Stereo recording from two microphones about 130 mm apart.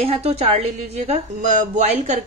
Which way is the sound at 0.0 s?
50° right (ahead or behind).